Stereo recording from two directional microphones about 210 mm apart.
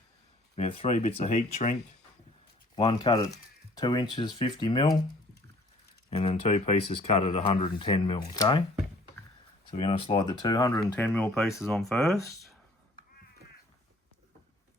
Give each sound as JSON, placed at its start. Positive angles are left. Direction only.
{"t": 0.5, "sound": "speech", "side_deg": 25}
{"t": 2.7, "sound": "speech", "side_deg": 20}
{"t": 6.1, "sound": "speech", "side_deg": 25}
{"t": 9.6, "sound": "speech", "side_deg": 25}